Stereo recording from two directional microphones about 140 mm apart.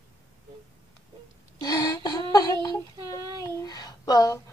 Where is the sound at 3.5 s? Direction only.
25° left (ahead or behind).